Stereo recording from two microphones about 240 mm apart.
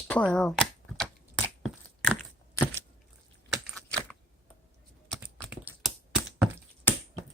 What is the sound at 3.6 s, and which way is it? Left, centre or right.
Computer keyboard, centre.